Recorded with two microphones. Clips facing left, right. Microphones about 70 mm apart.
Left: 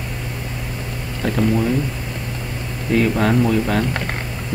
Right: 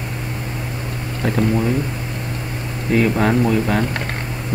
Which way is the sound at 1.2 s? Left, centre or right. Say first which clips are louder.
Right 1 dB; right.